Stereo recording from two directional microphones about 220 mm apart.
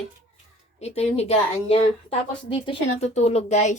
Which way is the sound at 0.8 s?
30° left (ahead or behind).